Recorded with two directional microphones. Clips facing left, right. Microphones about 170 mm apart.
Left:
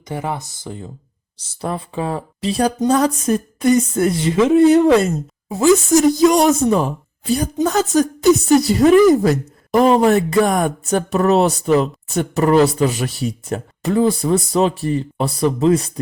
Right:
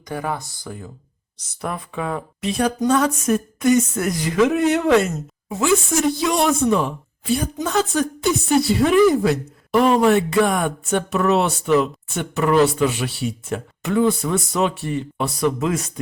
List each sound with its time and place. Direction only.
0.1 s speech: 20° left (ahead or behind)